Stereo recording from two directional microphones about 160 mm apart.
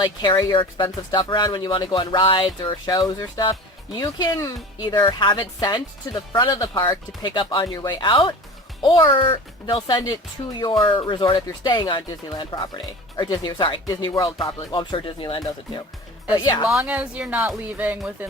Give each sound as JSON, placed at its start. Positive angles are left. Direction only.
{"t": 0.0, "sound": "speech", "side_deg": 25}
{"t": 16.7, "sound": "speech", "side_deg": -10}